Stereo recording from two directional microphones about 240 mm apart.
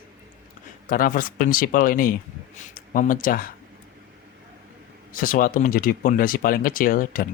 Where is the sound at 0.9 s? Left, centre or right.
Left.